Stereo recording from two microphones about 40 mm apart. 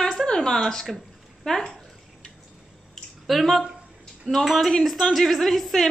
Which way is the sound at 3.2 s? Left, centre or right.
Centre.